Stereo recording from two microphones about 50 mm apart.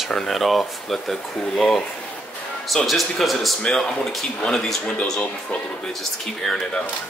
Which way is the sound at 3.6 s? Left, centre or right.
Centre.